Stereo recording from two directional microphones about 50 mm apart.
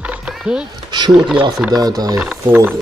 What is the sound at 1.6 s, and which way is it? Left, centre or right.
Speech, right.